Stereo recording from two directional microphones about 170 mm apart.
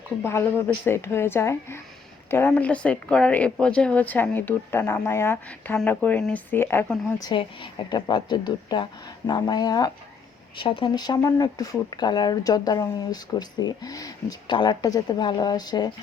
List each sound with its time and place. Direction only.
0.3 s a woman's voice: 15° left (ahead or behind)
7.2 s speech: 25° left (ahead or behind)